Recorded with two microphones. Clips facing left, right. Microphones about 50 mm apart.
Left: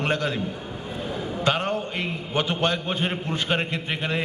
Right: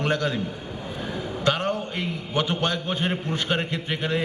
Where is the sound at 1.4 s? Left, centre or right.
Left.